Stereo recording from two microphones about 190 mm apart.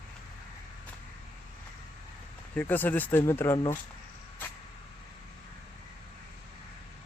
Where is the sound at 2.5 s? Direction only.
10° left (ahead or behind).